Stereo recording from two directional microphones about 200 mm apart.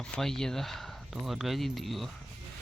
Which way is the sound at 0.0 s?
Centre (ahead or behind).